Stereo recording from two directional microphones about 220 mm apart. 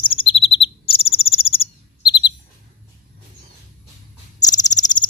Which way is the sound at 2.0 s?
20° left (ahead or behind).